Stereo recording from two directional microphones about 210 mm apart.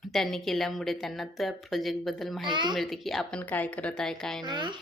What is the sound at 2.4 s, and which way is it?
Speech, 20° right (ahead or behind).